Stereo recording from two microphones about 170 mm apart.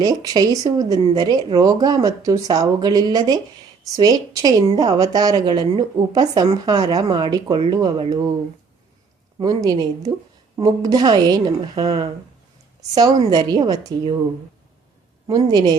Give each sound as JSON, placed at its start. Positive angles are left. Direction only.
{"t": 0.0, "sound": "a woman's voice", "side_deg": -25}
{"t": 9.4, "sound": "a woman's voice", "side_deg": -25}
{"t": 15.3, "sound": "a woman's voice", "side_deg": -25}